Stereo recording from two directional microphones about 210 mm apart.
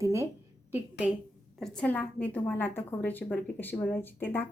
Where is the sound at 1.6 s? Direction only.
5° left (ahead or behind).